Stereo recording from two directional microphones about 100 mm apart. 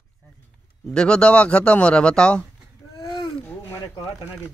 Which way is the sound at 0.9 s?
10° left (ahead or behind).